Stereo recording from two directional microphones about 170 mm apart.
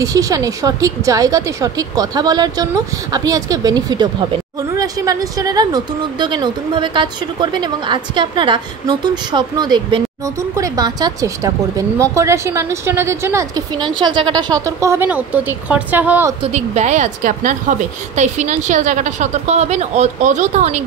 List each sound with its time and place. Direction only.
0.0 s speech: 20° right (ahead or behind)
13.9 s speech: 30° right (ahead or behind); by 16.3 s 10° right (ahead or behind)
16.5 s a woman's voice: 45° right (ahead or behind)